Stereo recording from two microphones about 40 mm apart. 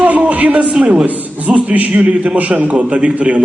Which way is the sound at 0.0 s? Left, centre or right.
Right.